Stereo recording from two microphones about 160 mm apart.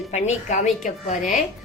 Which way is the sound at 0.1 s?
45° left (ahead or behind).